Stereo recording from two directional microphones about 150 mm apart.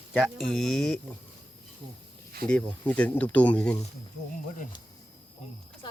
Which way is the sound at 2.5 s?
5° left (ahead or behind).